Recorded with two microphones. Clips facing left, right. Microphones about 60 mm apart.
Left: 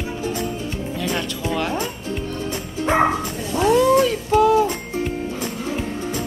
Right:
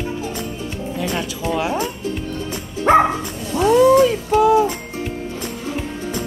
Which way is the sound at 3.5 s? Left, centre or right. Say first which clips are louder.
Right 3 dB; centre.